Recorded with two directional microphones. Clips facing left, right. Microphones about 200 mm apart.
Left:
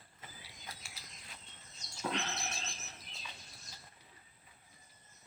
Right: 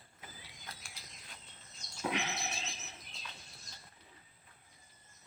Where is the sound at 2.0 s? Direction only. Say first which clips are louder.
Right 1 dB; 10° right (ahead or behind).